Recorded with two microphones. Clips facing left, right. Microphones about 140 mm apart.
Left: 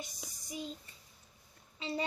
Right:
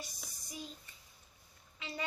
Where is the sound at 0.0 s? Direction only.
20° left (ahead or behind).